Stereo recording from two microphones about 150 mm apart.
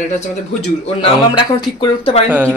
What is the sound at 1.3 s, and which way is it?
Speech, 35° left (ahead or behind).